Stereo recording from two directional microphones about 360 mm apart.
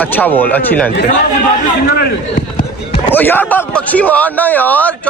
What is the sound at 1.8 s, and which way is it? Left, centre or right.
Speech, left.